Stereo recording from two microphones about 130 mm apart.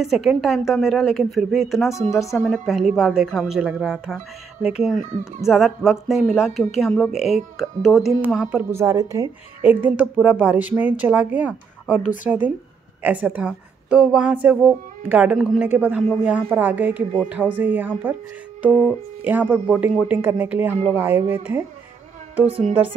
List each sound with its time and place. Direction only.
0.0 s speech: centre (ahead or behind)
8.3 s a woman's voice: 10° right (ahead or behind)
19.2 s a woman's voice: 15° right (ahead or behind)
22.5 s speech: 50° right (ahead or behind)